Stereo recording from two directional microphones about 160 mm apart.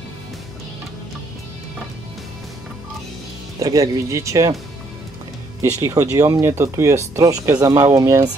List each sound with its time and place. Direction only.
3.5 s speech: 20° right (ahead or behind)
5.6 s speech: 20° right (ahead or behind)